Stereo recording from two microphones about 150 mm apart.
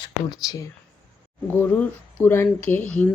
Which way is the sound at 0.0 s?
25° left (ahead or behind).